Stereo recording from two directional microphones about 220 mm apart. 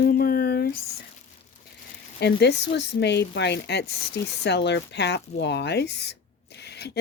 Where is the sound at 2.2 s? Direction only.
50° left (ahead or behind).